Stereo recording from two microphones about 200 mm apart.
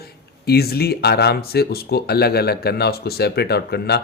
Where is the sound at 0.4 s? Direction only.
50° left (ahead or behind).